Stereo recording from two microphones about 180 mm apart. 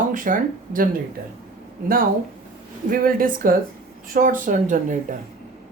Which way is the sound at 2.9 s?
50° right (ahead or behind).